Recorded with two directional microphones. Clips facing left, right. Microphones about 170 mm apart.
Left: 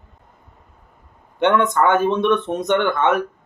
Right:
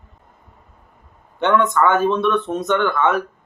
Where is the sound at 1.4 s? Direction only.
20° left (ahead or behind).